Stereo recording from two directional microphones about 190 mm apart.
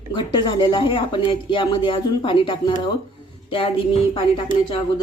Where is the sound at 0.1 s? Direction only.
25° left (ahead or behind).